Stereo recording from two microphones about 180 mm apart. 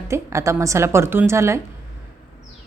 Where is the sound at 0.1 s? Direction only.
15° right (ahead or behind).